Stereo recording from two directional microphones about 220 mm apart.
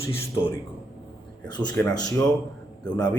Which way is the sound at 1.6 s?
20° left (ahead or behind).